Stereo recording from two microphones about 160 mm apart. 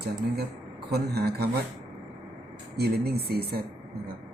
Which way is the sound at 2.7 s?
80° right.